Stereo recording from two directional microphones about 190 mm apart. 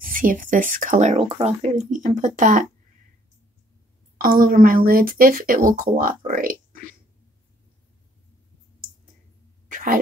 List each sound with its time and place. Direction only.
0.0 s speech: 45° right (ahead or behind)
4.2 s speech: 50° right (ahead or behind)